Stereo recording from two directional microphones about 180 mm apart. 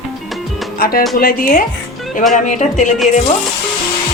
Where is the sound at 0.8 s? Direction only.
55° left (ahead or behind).